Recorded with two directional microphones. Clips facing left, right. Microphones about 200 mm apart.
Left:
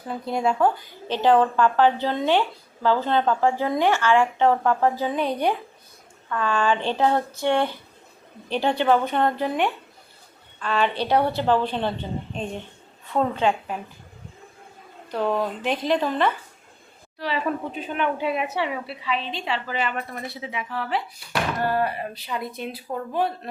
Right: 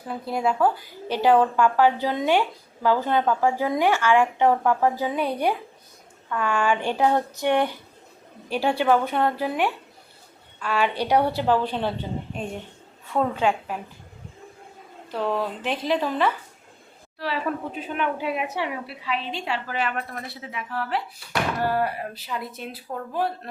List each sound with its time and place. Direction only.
0.1 s a woman's voice: 5° right (ahead or behind)
15.1 s a woman's voice: centre (ahead or behind)